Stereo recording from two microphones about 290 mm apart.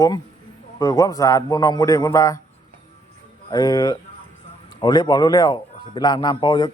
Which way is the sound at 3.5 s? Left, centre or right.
Centre.